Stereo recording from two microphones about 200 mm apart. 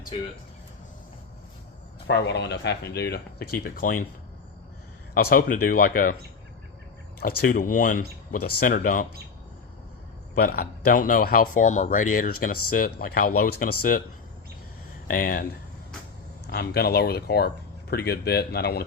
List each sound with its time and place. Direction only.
2.0 s speech: 60° left (ahead or behind)
5.1 s speech: 45° left (ahead or behind)
7.2 s speech: 45° left (ahead or behind)
10.3 s speech: 50° left (ahead or behind)
15.0 s speech: 45° left (ahead or behind)
16.5 s speech: 50° left (ahead or behind)